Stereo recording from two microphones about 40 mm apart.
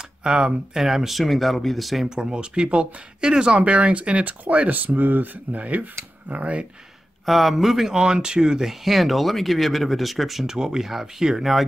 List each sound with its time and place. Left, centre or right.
0.2 s speech: right
0.7 s speech: centre
2.0 s speech: centre
3.5 s speech: right
5.6 s speech: right
7.2 s speech: centre
7.9 s speech: centre
10.4 s speech: centre